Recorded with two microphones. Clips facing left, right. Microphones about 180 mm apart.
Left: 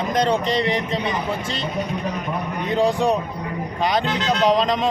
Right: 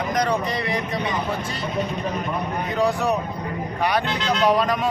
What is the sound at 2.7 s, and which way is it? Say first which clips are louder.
Speech: left 3 dB; 25° left (ahead or behind).